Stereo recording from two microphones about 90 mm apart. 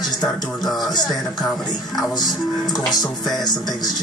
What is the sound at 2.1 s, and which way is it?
Music, 50° left (ahead or behind).